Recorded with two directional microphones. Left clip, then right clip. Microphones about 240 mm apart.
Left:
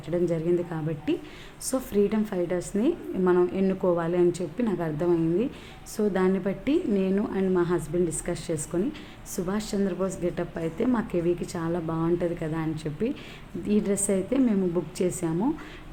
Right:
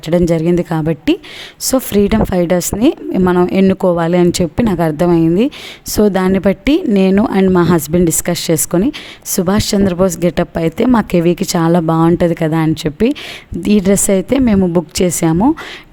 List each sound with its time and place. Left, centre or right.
0.1 s a woman's voice: right